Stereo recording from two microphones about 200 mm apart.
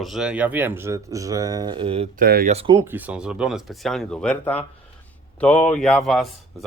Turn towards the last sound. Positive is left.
turn(degrees=0)  # may be behind; listen again after turning